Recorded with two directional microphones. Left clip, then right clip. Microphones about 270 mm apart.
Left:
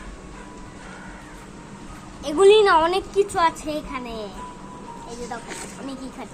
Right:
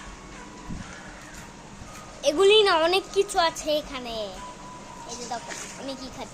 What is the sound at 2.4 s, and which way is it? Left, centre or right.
A woman's voice, centre.